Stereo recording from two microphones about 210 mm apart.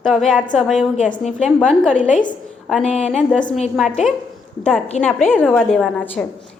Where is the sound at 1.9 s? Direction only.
35° left (ahead or behind).